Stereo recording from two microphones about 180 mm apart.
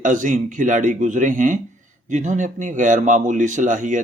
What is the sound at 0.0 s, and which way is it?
A man's voice, 45° right (ahead or behind).